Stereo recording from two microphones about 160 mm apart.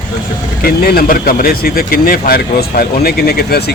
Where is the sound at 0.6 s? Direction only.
70° left (ahead or behind).